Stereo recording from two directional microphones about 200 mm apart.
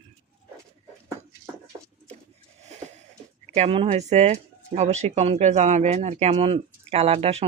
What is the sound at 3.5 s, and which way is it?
Speech, 30° right (ahead or behind).